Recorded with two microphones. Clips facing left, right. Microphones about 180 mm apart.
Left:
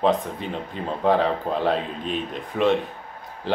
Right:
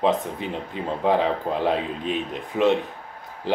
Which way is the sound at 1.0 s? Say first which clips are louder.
Left 1 dB; 15° right (ahead or behind).